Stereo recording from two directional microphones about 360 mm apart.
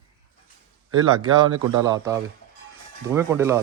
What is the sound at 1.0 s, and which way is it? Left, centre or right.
A man's voice, centre.